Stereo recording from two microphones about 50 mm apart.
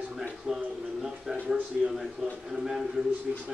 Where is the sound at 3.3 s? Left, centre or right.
Right.